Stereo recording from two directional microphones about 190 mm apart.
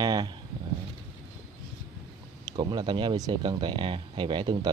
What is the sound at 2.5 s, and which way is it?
Speech, 25° right (ahead or behind).